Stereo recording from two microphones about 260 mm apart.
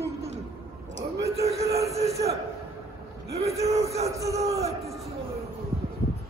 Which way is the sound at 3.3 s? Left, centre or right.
Right.